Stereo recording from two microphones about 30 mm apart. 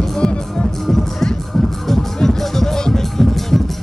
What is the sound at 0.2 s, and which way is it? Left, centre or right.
Music, left.